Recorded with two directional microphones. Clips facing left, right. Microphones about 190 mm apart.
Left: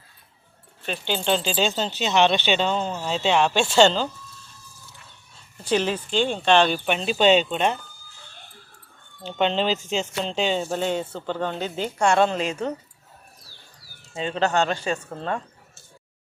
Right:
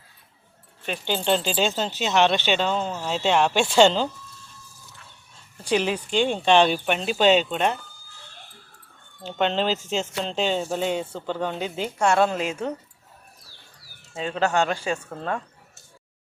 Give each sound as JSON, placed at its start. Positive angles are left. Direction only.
{"t": 0.9, "sound": "speech", "side_deg": -10}
{"t": 5.6, "sound": "speech", "side_deg": -10}
{"t": 9.2, "sound": "speech", "side_deg": -5}
{"t": 14.1, "sound": "speech", "side_deg": -5}